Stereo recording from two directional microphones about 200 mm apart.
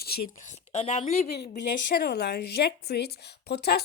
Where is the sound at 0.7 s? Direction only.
35° left (ahead or behind).